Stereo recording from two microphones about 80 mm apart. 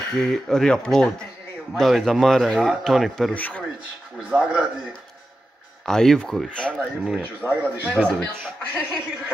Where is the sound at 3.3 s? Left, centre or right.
Left.